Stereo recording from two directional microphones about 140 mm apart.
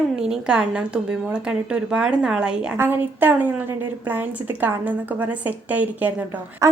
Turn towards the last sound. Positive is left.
turn(degrees=-20)  # may be behind; listen again after turning